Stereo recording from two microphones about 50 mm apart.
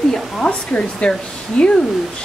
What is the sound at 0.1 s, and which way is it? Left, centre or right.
Speech, left.